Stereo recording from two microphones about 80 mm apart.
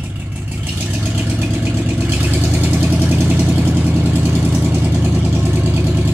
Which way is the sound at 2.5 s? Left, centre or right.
Right.